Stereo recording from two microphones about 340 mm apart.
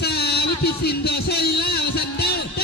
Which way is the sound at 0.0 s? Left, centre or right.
Left.